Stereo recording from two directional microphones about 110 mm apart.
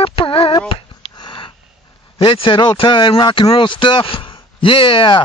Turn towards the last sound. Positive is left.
turn(degrees=50)  # may be behind; listen again after turning